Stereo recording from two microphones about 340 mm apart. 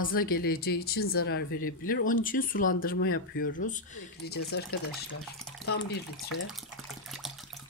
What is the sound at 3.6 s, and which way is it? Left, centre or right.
Speech, left.